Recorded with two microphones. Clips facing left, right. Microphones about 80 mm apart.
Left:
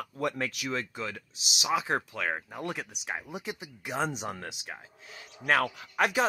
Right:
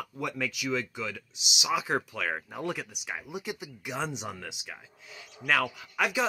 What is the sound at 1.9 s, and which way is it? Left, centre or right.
Speech, left.